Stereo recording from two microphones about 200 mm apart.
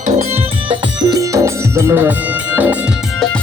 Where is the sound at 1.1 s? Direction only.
15° right (ahead or behind).